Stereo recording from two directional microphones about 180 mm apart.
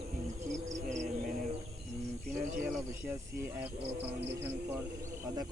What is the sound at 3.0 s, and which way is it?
Speech, 10° right (ahead or behind).